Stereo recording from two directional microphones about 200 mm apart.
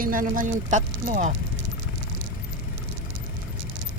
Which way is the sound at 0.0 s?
45° right (ahead or behind).